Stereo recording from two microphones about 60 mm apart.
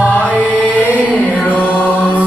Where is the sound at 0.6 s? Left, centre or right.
Left.